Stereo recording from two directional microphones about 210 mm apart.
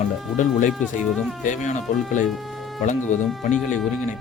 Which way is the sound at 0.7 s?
Centre (ahead or behind).